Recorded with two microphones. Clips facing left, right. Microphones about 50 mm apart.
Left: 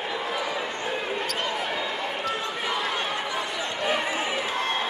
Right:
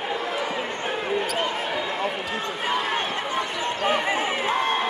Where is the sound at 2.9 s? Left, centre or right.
Right.